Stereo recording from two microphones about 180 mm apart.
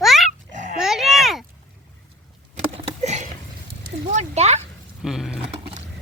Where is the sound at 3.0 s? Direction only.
40° right (ahead or behind).